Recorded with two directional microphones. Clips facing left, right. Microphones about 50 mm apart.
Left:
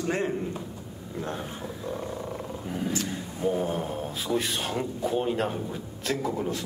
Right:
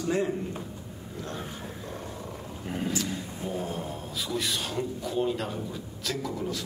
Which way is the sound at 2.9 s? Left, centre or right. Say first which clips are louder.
Left 1 dB; left.